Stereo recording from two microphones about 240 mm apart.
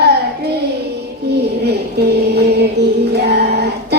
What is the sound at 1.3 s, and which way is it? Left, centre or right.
Music, right.